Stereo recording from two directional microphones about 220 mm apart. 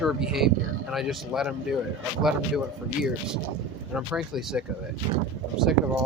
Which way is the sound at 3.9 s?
5° right (ahead or behind).